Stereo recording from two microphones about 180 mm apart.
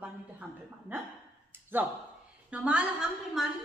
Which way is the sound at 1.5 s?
10° right (ahead or behind).